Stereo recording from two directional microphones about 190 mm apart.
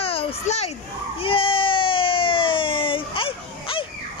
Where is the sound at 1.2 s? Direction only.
30° left (ahead or behind).